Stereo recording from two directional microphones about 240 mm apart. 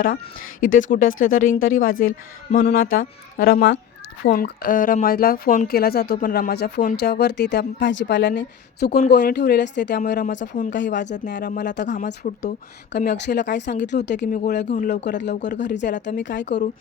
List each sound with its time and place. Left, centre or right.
0.6 s a woman's voice: left
15.2 s a woman's voice: left